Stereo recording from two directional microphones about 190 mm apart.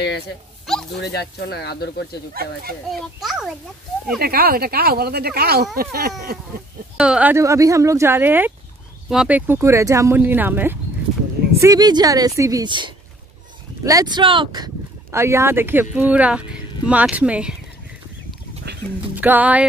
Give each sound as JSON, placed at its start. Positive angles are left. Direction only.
{"t": 0.7, "sound": "a sound", "side_deg": 0}
{"t": 1.0, "sound": "speech", "side_deg": 60}
{"t": 2.9, "sound": "a child's voice", "side_deg": 0}
{"t": 4.2, "sound": "speech", "side_deg": -55}
{"t": 7.0, "sound": "a woman's voice", "side_deg": -5}
{"t": 18.6, "sound": "a sound", "side_deg": -60}
{"t": 19.1, "sound": "speech", "side_deg": -10}